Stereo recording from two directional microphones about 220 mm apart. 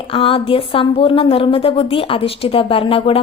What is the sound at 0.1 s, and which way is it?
A woman's voice, 25° left (ahead or behind).